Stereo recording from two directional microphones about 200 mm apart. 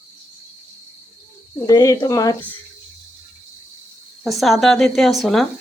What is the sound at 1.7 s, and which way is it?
Speech, 15° left (ahead or behind).